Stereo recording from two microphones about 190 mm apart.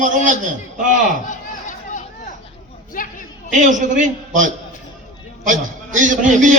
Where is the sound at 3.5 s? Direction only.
40° right (ahead or behind).